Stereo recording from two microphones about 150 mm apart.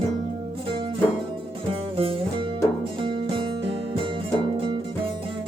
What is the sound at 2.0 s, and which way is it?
Music, 40° right (ahead or behind).